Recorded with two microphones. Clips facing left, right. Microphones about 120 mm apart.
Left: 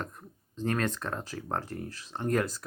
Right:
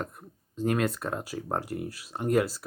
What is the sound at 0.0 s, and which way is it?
Speech, 10° right (ahead or behind).